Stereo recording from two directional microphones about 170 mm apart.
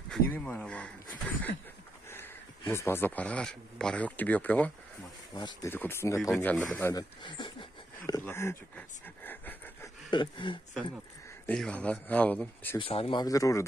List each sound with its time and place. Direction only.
0.1 s speech: 10° left (ahead or behind)
2.7 s speech: 15° left (ahead or behind)
5.3 s speech: 25° left (ahead or behind)
5.7 s speech: 15° left (ahead or behind)
8.1 s speech: 15° left (ahead or behind)
10.1 s speech: 30° left (ahead or behind)
11.4 s speech: 5° left (ahead or behind)
12.7 s speech: 35° left (ahead or behind)